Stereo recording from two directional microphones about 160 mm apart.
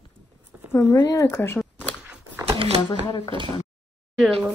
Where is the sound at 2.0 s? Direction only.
10° right (ahead or behind).